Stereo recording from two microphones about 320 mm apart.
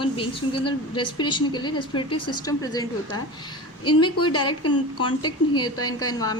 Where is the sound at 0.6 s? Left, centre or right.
Left.